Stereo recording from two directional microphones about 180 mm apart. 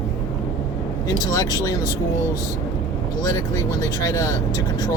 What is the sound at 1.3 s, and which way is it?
Speech, 20° left (ahead or behind).